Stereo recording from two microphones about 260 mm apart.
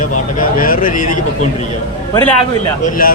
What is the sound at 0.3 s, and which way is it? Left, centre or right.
A man's voice, left.